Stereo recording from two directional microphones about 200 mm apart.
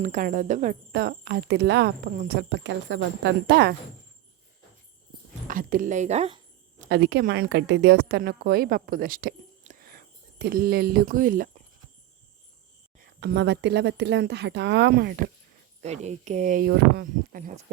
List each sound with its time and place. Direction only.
0.0 s speech: 40° right (ahead or behind); by 1.9 s 60° right (ahead or behind)
2.1 s speech: 50° right (ahead or behind)
5.5 s cricket: 45° right (ahead or behind)
6.8 s a woman's voice: 55° right (ahead or behind)
13.0 s speech: 55° right (ahead or behind)
15.8 s speech: 35° right (ahead or behind)